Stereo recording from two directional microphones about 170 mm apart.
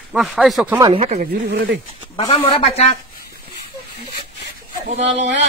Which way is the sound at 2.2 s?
35° left (ahead or behind).